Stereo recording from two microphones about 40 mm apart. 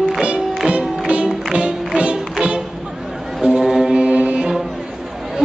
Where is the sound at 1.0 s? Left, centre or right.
Right.